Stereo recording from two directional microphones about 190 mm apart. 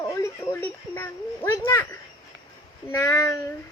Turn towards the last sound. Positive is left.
turn(degrees=15)  # may be behind; listen again after turning